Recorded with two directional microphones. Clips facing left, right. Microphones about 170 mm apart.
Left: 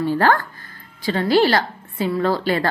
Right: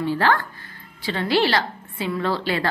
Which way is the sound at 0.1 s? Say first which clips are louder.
Left 3 dB; 45° left (ahead or behind).